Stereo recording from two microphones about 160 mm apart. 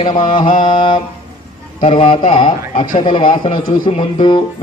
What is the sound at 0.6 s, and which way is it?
A man's voice, 30° left (ahead or behind).